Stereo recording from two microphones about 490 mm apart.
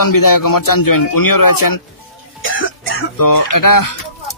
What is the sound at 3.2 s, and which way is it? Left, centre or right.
Speech, left.